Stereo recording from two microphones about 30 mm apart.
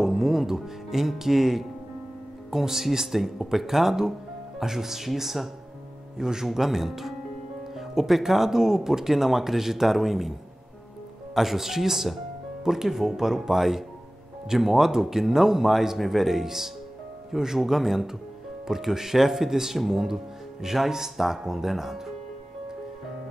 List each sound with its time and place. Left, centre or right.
0.0 s music: centre
0.8 s speech: centre
6.1 s speech: centre
11.3 s speech: centre